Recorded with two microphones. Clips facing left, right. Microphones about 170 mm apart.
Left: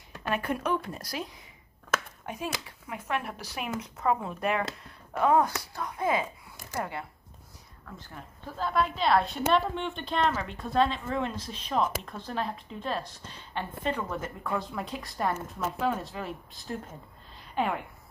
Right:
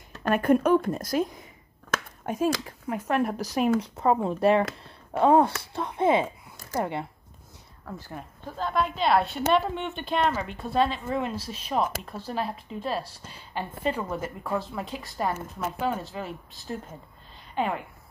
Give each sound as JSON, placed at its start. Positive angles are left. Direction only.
{"t": 0.3, "sound": "a woman's voice", "side_deg": -45}
{"t": 8.5, "sound": "a woman's voice", "side_deg": 0}